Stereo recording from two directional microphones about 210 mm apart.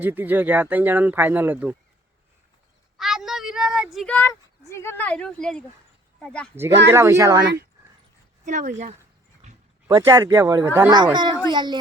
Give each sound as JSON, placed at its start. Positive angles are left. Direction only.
{"t": 0.0, "sound": "speech", "side_deg": -10}
{"t": 3.0, "sound": "speech", "side_deg": 0}
{"t": 6.9, "sound": "speech", "side_deg": -15}
{"t": 8.4, "sound": "speech", "side_deg": -35}
{"t": 9.4, "sound": "a sound", "side_deg": -35}
{"t": 9.8, "sound": "speech", "side_deg": -15}